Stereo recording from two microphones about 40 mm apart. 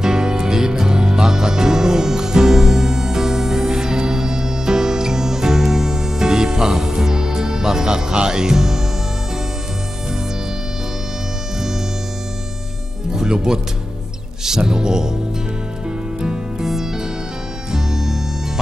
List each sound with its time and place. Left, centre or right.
0.0 s music: centre
13.1 s music: centre
16.2 s music: centre